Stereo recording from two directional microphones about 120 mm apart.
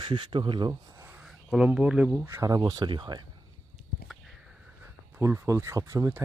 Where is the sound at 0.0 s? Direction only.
45° right (ahead or behind).